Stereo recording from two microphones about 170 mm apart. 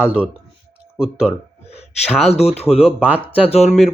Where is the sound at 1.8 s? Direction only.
35° left (ahead or behind).